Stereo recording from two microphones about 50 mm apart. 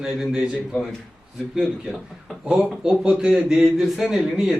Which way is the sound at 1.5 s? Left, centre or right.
Centre.